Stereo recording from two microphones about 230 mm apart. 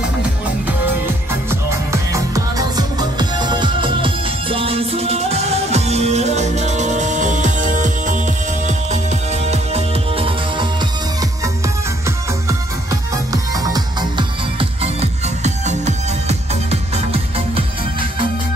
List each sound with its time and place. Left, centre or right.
1.5 s music: centre
13.3 s music: centre